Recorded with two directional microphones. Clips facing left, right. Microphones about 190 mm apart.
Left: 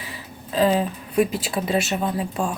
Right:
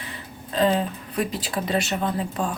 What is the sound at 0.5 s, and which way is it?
Speech, 10° left (ahead or behind).